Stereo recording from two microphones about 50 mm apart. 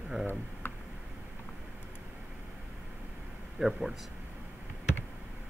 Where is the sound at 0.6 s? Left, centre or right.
Left.